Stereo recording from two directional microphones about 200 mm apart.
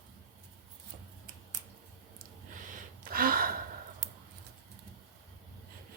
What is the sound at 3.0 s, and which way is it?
Gasp, 45° right (ahead or behind).